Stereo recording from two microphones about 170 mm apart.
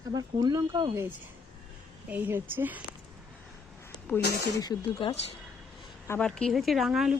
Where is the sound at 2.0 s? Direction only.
10° right (ahead or behind).